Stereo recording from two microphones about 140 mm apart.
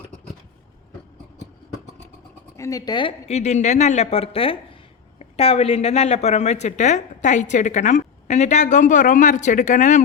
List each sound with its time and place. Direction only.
2.6 s speech: 25° left (ahead or behind)
3.2 s a woman's voice: 50° left (ahead or behind)